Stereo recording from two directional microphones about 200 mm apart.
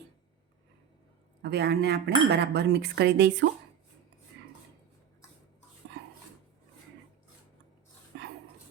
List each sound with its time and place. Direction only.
1.4 s speech: 55° right (ahead or behind)
4.4 s cutlery: 55° right (ahead or behind)